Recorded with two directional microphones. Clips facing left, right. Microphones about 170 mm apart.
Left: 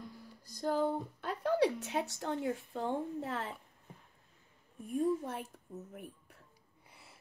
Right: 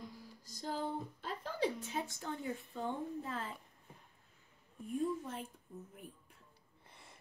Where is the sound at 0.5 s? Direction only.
60° left (ahead or behind).